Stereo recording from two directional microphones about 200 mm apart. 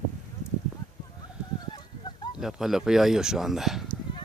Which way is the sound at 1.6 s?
20° left (ahead or behind).